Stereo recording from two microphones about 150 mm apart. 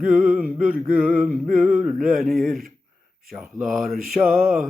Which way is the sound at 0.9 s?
5° right (ahead or behind).